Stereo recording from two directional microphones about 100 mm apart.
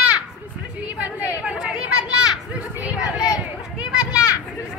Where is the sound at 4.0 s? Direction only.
10° right (ahead or behind).